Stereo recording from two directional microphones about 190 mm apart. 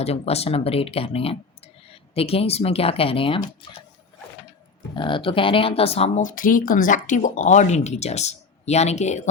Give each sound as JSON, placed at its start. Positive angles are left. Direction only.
{"t": 0.0, "sound": "speech", "side_deg": 35}
{"t": 4.9, "sound": "speech", "side_deg": 25}